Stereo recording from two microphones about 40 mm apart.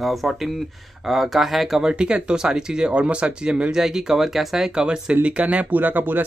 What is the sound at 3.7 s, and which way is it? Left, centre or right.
Speech, centre.